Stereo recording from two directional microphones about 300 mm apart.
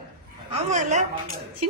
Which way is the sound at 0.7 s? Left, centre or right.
Right.